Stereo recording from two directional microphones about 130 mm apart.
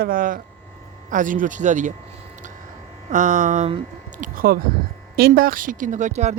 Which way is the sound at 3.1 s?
70° right (ahead or behind).